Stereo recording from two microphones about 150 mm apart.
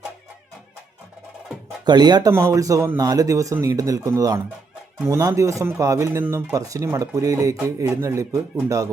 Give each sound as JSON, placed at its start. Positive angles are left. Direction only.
{"t": 1.8, "sound": "speech", "side_deg": -30}